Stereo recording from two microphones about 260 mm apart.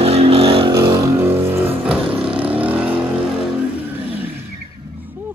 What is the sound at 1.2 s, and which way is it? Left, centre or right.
Vehicle, centre.